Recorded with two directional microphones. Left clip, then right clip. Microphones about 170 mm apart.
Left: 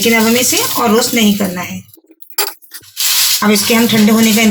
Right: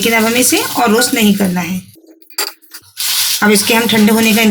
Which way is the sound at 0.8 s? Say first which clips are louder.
Right 2 dB; 60° right (ahead or behind).